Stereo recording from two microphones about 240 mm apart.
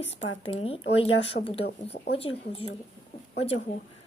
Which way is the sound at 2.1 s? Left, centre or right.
Left.